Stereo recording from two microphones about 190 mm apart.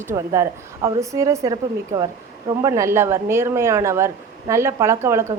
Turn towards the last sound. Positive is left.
turn(degrees=-15)  # may be behind; listen again after turning